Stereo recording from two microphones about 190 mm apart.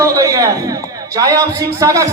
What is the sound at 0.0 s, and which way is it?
A man's voice, 15° right (ahead or behind).